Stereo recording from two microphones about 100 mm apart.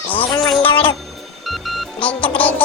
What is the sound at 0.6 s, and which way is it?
Speech, 60° left (ahead or behind).